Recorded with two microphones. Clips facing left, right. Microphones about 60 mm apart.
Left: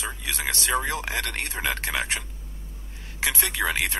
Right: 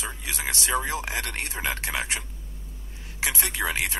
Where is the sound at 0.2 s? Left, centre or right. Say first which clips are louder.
Left 2 dB; left.